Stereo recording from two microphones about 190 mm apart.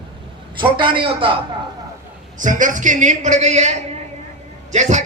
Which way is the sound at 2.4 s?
45° right (ahead or behind).